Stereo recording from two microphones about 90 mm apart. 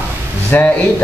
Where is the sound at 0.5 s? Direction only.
15° left (ahead or behind).